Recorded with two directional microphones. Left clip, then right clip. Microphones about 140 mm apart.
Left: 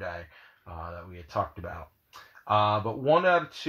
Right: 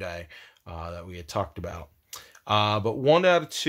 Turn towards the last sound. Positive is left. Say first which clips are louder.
# right 2 dB
turn(degrees=-40)  # may be behind; listen again after turning